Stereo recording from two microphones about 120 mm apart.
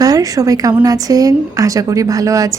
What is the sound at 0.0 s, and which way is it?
A woman's voice, 30° right (ahead or behind).